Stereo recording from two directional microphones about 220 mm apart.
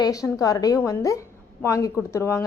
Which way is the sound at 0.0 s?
15° left (ahead or behind).